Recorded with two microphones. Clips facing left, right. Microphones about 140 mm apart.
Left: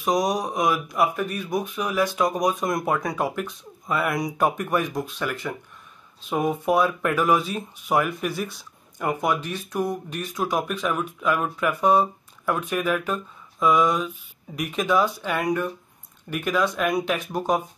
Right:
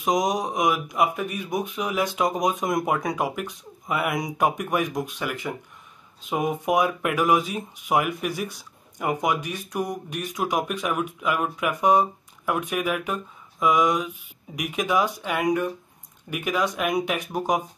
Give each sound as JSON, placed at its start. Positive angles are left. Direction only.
{"t": 0.0, "sound": "speech", "side_deg": -20}